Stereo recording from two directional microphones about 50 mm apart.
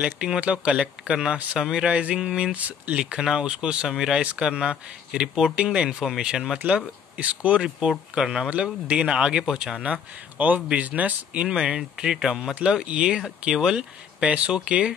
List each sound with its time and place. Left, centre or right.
0.4 s speech: right
2.5 s speech: right
3.0 s speech: centre
3.9 s speech: centre
7.2 s speech: right
8.1 s speech: centre
10.3 s speech: right
11.4 s speech: centre
14.2 s speech: right